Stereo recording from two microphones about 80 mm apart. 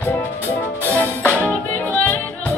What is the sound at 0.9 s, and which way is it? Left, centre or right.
Music, centre.